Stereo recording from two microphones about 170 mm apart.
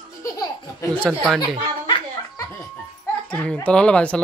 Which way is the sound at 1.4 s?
30° left (ahead or behind).